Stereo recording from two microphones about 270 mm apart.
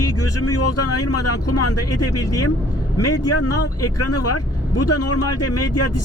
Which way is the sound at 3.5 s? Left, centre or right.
Left.